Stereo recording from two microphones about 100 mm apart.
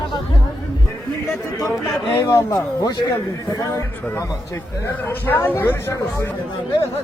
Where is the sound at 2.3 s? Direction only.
40° left (ahead or behind).